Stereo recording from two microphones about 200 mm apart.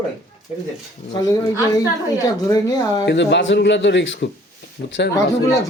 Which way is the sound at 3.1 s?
60° left (ahead or behind).